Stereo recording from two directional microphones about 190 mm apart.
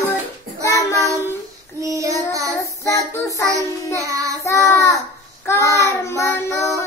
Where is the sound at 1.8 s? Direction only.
15° right (ahead or behind).